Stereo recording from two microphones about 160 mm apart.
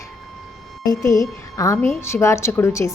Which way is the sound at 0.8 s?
20° left (ahead or behind).